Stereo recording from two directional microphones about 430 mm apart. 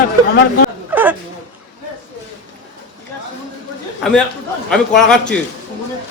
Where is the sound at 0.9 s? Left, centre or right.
Centre.